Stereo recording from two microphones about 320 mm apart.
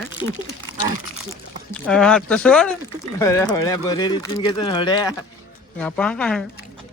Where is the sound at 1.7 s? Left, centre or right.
Centre.